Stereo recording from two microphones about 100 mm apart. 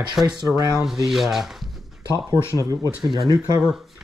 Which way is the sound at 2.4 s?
35° left (ahead or behind).